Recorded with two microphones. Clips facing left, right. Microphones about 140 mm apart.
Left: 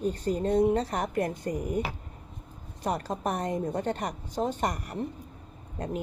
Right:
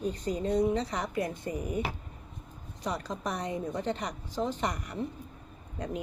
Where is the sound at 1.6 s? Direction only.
20° right (ahead or behind).